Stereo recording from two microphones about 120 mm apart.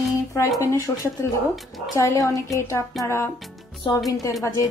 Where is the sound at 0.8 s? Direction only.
30° left (ahead or behind).